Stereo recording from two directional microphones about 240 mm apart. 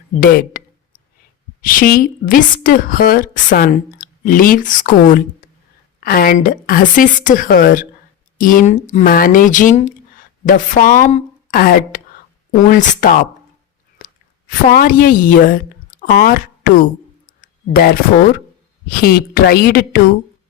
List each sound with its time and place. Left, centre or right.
0.2 s a woman's voice: left
1.6 s a woman's voice: left
14.5 s speech: left
17.2 s a sound: left
18.9 s a woman's voice: left